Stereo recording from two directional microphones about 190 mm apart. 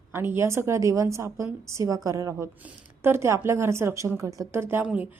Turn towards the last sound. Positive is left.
turn(degrees=-5)  # may be behind; listen again after turning